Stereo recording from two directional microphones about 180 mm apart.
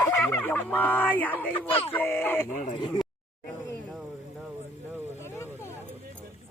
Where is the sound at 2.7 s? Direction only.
25° left (ahead or behind).